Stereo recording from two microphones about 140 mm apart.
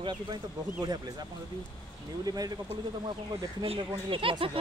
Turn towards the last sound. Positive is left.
turn(degrees=-40)  # may be behind; listen again after turning